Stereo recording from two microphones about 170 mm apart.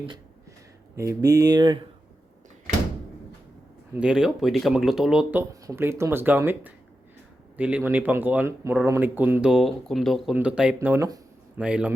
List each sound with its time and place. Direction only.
0.9 s speech: 20° right (ahead or behind)
3.9 s speech: 5° right (ahead or behind)